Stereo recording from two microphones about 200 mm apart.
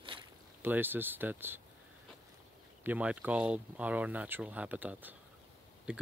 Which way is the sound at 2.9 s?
5° right (ahead or behind).